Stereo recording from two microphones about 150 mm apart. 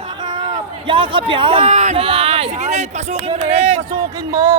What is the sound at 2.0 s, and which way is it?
Speech, 40° right (ahead or behind).